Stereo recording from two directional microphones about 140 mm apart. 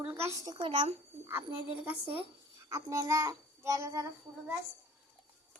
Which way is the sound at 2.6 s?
25° right (ahead or behind).